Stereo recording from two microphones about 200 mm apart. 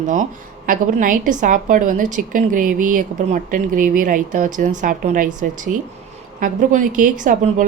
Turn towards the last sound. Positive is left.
turn(degrees=-40)  # may be behind; listen again after turning